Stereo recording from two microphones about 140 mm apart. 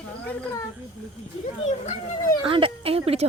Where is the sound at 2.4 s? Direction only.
40° right (ahead or behind).